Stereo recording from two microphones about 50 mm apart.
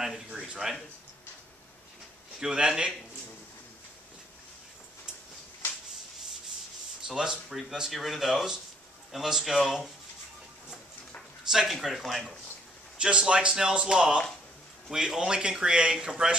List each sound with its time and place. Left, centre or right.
0.5 s speech: centre
2.4 s speech: centre
7.1 s speech: centre
11.5 s speech: centre
12.9 s a man's voice: centre